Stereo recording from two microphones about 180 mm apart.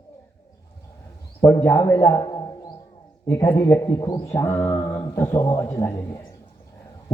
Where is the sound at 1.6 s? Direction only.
15° left (ahead or behind).